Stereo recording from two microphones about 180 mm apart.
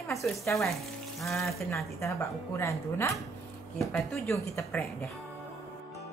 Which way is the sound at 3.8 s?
Centre (ahead or behind).